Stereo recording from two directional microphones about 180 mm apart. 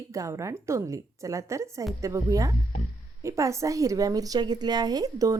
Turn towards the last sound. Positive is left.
turn(degrees=-20)  # may be behind; listen again after turning